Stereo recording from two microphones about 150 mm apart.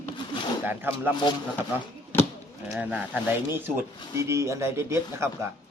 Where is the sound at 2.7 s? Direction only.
10° right (ahead or behind).